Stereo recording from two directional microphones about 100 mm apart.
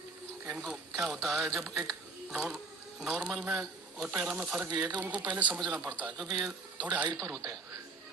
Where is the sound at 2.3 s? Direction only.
5° right (ahead or behind).